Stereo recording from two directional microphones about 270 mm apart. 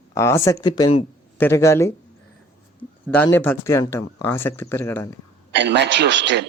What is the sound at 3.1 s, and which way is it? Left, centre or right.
Speech, centre.